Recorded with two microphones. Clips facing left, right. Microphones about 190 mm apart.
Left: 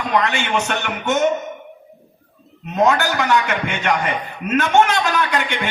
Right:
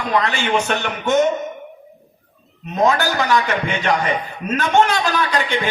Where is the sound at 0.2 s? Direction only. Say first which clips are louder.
Right 1 dB; 35° right (ahead or behind).